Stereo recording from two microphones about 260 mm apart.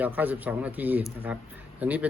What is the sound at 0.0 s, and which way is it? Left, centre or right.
Speech, centre.